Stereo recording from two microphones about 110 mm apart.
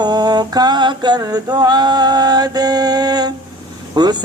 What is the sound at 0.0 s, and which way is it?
Speech, 40° right (ahead or behind).